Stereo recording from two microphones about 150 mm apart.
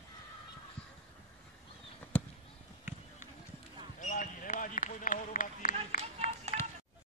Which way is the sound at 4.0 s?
60° left (ahead or behind).